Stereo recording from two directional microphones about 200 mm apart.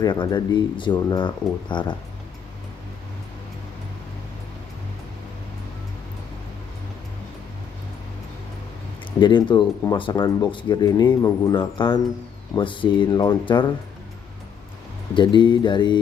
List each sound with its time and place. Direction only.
0.0 s speech: 20° left (ahead or behind)
9.2 s speech: 25° left (ahead or behind)
15.1 s speech: 25° left (ahead or behind)